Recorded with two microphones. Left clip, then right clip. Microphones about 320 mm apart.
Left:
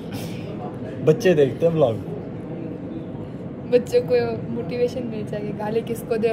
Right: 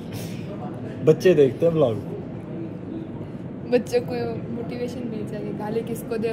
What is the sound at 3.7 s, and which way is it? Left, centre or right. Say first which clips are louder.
Speech: left 4 dB; centre.